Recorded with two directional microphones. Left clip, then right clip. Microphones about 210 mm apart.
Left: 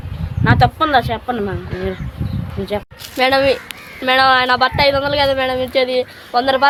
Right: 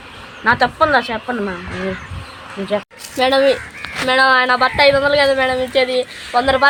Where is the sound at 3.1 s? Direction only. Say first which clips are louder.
Even; 5° left (ahead or behind).